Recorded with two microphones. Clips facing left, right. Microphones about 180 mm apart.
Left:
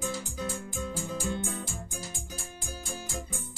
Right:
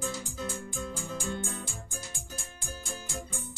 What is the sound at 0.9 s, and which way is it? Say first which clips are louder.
Music: left 3 dB; 40° left (ahead or behind).